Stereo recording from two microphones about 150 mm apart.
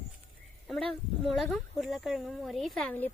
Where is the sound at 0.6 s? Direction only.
Centre (ahead or behind).